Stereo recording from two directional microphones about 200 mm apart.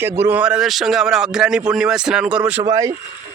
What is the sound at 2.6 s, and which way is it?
Speech, 20° right (ahead or behind).